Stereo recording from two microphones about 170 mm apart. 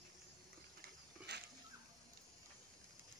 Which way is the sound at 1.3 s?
75° right (ahead or behind).